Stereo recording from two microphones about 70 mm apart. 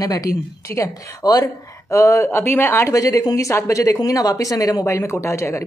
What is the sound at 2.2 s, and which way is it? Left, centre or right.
Speech, left.